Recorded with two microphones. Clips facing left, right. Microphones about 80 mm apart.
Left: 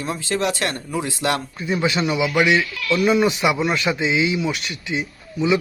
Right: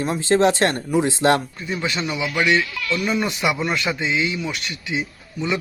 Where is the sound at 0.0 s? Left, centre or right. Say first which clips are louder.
Right 5 dB; right.